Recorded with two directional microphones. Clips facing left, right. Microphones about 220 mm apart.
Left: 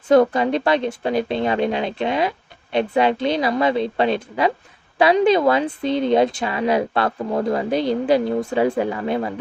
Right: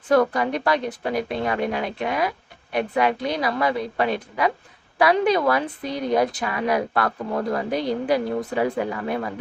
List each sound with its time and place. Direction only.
0.1 s speech: 25° left (ahead or behind)